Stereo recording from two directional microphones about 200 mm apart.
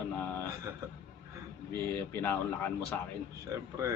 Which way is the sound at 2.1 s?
10° left (ahead or behind).